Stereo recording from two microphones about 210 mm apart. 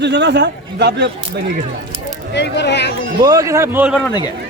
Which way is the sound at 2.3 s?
55° left (ahead or behind).